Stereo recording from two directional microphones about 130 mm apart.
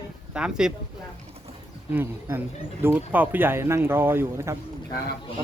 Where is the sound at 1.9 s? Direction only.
20° right (ahead or behind).